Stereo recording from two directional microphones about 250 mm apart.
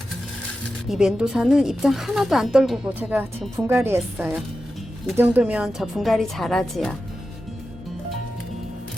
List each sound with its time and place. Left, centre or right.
0.9 s a woman's voice: centre